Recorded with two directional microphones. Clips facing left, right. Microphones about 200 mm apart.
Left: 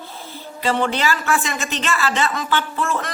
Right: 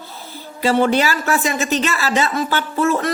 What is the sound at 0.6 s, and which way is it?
A man's voice, 40° right (ahead or behind).